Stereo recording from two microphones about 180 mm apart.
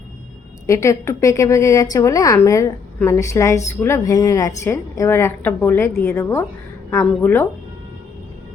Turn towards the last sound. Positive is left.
turn(degrees=10)  # may be behind; listen again after turning